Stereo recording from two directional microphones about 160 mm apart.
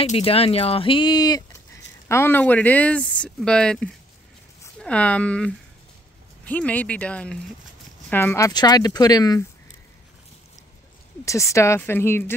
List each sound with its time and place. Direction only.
0.0 s speech: 40° left (ahead or behind)
2.0 s speech: 15° left (ahead or behind)
11.2 s speech: 20° left (ahead or behind)